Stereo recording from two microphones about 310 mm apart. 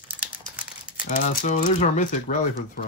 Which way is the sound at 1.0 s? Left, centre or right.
Left.